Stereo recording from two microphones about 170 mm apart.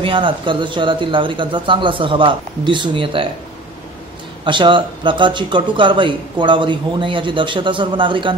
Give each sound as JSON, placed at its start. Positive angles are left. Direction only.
{"t": 0.0, "sound": "speech", "side_deg": -30}
{"t": 4.5, "sound": "speech", "side_deg": -30}